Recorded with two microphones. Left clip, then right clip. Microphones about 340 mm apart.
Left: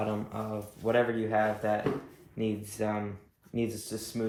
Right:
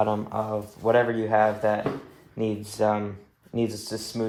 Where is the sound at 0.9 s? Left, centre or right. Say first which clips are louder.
Right 6 dB; centre.